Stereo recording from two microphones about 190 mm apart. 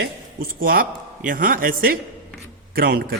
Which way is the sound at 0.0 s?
55° right (ahead or behind).